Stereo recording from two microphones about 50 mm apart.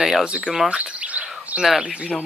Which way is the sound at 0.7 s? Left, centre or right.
Right.